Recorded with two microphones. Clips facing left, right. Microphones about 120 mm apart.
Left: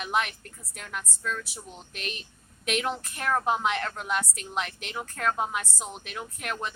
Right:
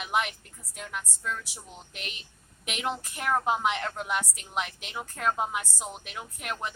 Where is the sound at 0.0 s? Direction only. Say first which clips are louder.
Left 1 dB; 15° right (ahead or behind).